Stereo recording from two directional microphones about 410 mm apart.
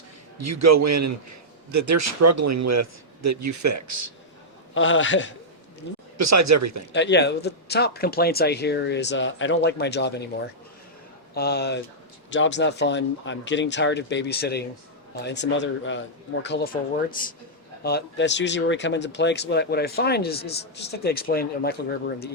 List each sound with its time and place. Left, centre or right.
0.3 s speech: right
4.7 s a man's voice: left
6.1 s speech: right
6.9 s speech: left